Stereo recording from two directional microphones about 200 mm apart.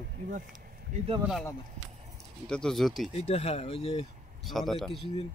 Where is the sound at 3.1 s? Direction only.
30° left (ahead or behind).